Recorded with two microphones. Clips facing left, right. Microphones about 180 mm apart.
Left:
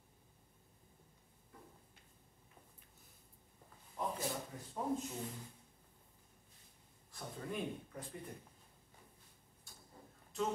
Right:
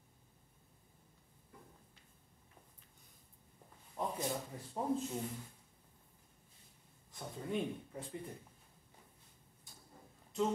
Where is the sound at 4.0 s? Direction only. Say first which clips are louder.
Right 1 dB; 25° right (ahead or behind).